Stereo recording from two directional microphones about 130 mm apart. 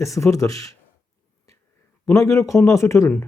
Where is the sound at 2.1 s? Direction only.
20° left (ahead or behind).